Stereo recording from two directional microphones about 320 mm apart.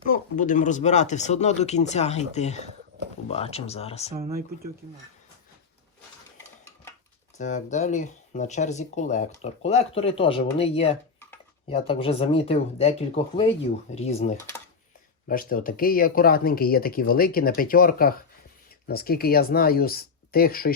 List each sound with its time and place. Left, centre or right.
0.1 s speech: left
7.3 s speech: left